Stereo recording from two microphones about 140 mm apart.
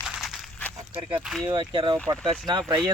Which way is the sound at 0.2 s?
Centre (ahead or behind).